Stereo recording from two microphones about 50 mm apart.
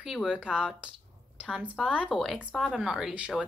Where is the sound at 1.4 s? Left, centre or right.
Right.